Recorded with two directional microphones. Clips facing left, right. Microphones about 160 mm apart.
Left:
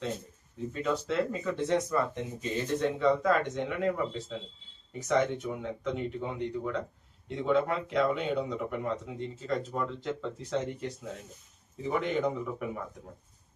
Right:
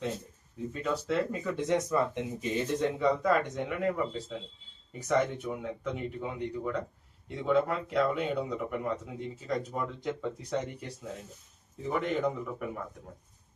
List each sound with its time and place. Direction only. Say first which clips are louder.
0.7 s speech: even; 5° right (ahead or behind)
1.5 s speech: right 1 dB; 15° right (ahead or behind); by 12.8 s centre (ahead or behind)